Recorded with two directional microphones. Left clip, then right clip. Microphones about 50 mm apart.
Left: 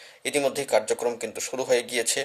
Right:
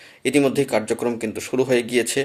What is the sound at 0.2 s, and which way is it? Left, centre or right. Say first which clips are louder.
Speech: right 6 dB; left.